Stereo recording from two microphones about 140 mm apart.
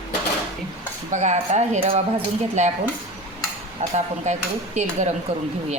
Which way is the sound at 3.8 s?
55° right (ahead or behind).